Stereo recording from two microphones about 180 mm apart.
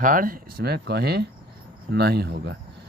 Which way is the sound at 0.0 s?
50° right (ahead or behind).